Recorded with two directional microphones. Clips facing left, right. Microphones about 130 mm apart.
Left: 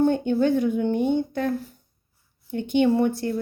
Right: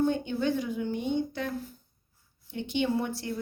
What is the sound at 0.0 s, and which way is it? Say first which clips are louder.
Speech: left 7 dB; 50° left (ahead or behind).